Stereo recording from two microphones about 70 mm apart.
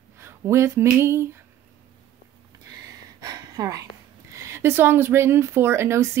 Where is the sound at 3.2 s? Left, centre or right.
Right.